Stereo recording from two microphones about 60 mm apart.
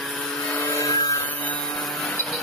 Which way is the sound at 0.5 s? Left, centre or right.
Left.